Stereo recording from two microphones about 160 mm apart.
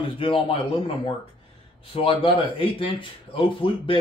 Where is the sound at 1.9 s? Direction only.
35° left (ahead or behind).